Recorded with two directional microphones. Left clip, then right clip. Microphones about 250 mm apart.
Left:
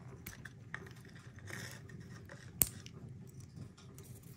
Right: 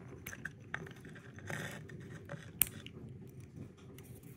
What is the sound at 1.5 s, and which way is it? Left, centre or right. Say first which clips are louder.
Vehicle: right 5 dB; left.